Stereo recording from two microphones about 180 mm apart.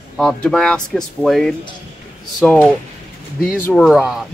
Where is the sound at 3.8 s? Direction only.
Centre (ahead or behind).